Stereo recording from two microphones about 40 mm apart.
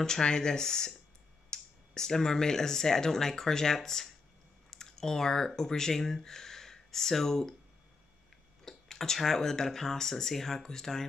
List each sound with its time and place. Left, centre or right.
0.0 s speech: centre
4.6 s a sound: centre
5.6 s speech: centre
8.6 s speech: centre